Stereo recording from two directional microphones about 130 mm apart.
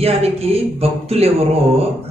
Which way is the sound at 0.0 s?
50° right (ahead or behind).